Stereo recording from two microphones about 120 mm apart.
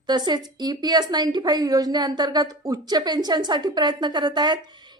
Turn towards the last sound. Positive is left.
turn(degrees=-40)  # may be behind; listen again after turning